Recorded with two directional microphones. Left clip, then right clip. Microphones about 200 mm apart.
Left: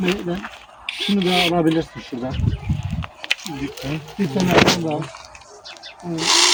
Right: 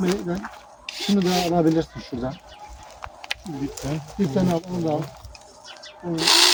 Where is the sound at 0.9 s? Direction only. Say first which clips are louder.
Left 4 dB; 25° right (ahead or behind).